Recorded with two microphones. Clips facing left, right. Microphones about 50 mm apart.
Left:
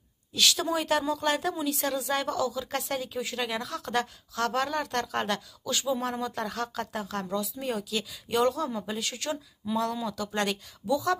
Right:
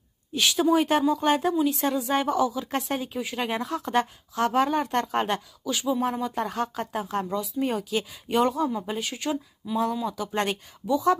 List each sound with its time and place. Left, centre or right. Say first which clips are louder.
0.3 s speech: right 5 dB; centre
3.4 s speech: right 4 dB; right
5.9 s speech: right 4 dB; centre
6.4 s speech: right 4 dB; right
7.6 s speech: right 4 dB; right